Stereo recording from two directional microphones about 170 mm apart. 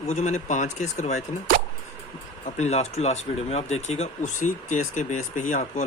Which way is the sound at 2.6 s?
40° left (ahead or behind).